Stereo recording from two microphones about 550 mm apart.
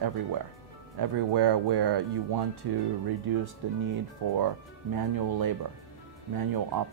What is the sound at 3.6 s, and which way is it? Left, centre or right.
Speech, right.